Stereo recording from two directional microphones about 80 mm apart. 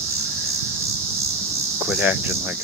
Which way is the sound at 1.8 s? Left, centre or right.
Centre.